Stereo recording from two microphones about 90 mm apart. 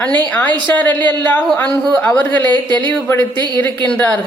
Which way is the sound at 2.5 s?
60° right (ahead or behind).